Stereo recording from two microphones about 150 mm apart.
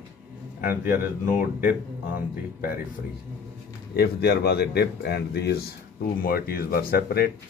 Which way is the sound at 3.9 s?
90° left.